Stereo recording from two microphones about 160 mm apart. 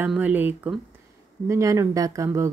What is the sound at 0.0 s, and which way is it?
Speech, 10° right (ahead or behind).